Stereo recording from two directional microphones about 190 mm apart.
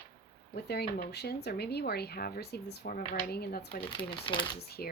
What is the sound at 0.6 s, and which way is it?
Speech, 60° left (ahead or behind).